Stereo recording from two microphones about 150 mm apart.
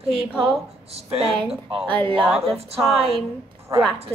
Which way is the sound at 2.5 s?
40° right (ahead or behind).